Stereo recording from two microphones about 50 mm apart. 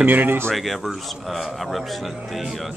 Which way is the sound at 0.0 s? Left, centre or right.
Right.